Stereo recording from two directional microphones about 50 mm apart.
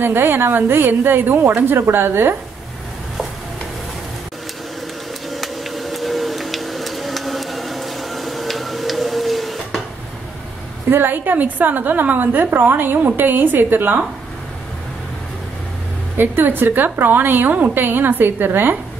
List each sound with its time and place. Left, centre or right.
0.0 s a woman's voice: right
5.3 s a sound: centre
10.9 s a woman's voice: right
16.2 s a woman's voice: right
17.8 s a woman's voice: right